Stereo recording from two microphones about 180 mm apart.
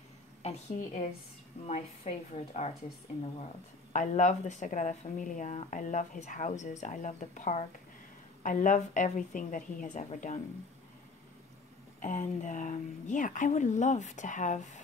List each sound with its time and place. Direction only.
0.4 s speech: 40° left (ahead or behind)
3.9 s a woman's voice: 45° left (ahead or behind)
12.0 s a woman's voice: 45° left (ahead or behind)